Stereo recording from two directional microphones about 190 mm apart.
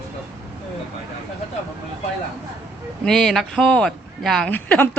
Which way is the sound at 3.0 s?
Centre (ahead or behind).